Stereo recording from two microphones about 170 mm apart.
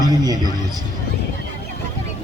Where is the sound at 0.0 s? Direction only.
25° right (ahead or behind).